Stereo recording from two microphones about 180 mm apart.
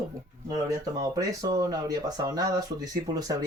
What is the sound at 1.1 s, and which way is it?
Speech, 20° right (ahead or behind).